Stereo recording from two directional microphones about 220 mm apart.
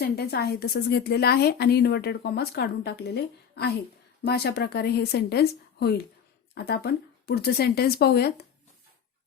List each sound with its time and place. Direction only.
0.0 s a woman's voice: 45° left (ahead or behind)